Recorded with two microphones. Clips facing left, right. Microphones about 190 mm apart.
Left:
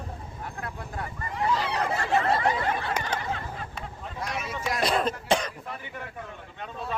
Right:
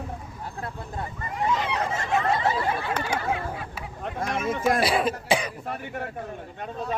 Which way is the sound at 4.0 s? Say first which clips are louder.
Right 7 dB; 50° right (ahead or behind).